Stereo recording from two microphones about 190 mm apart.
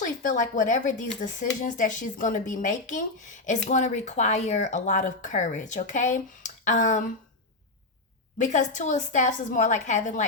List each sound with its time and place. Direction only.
0.0 s speech: 45° left (ahead or behind)
8.4 s speech: 40° left (ahead or behind)